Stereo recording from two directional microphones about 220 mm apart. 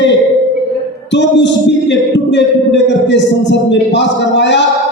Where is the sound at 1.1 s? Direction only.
55° left (ahead or behind).